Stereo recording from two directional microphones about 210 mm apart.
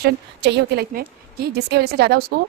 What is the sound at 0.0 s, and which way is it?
Speech, 50° right (ahead or behind).